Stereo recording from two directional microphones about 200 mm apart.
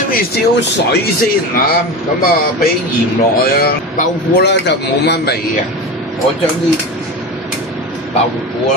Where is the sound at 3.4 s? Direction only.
50° left (ahead or behind).